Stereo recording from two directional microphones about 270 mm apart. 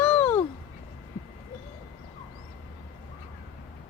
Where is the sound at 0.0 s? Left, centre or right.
Centre.